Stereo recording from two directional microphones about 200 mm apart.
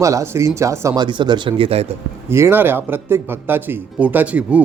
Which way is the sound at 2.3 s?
10° right (ahead or behind).